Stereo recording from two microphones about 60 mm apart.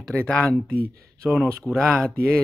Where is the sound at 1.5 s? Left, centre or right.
Centre.